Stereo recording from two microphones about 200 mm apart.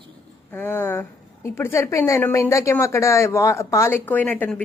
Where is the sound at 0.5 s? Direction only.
10° left (ahead or behind).